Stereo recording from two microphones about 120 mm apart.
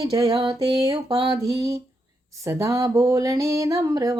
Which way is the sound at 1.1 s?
30° right (ahead or behind).